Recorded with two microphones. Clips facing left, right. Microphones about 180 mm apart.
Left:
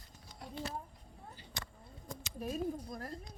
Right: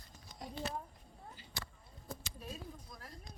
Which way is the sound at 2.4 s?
50° left (ahead or behind).